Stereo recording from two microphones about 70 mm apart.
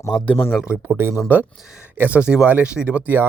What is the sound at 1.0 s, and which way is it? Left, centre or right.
Speech, right.